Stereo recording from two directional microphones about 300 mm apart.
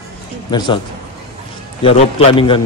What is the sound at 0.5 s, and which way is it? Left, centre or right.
Speech, centre.